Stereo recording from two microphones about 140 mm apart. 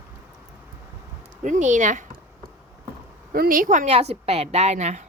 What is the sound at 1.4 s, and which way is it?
Speech, 65° right (ahead or behind).